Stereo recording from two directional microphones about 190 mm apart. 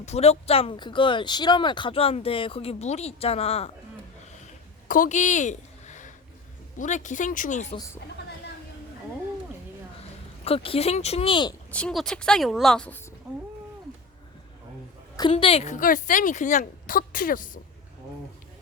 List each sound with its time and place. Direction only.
0.0 s speech: 35° left (ahead or behind)
4.9 s a woman's voice: 45° left (ahead or behind)
10.4 s speech: 30° left (ahead or behind)
11.7 s a woman's voice: 5° left (ahead or behind)
15.1 s a woman's voice: 25° left (ahead or behind); by 17.6 s 45° left (ahead or behind)